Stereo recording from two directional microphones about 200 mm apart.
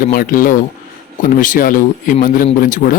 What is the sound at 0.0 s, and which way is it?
Speech, 45° left (ahead or behind).